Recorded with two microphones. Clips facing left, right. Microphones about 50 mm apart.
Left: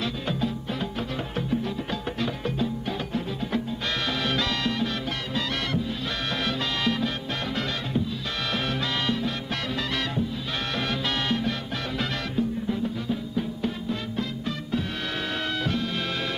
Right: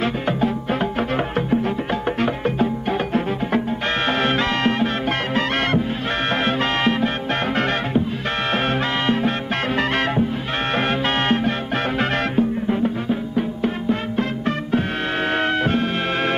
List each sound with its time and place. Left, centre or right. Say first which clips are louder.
2.2 s music: right 6 dB; right
4.2 s music: right 7 dB; right
6.4 s music: right 6 dB; right
9.0 s music: right 9 dB; right
11.2 s music: right 7 dB; right
15.6 s music: right 8 dB; right